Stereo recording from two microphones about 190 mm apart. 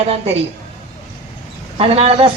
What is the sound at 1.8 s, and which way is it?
Speech, 35° right (ahead or behind).